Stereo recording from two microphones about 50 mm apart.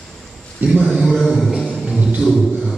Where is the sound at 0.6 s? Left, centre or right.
Right.